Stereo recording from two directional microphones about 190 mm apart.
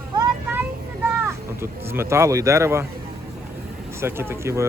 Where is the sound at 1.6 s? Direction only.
10° right (ahead or behind).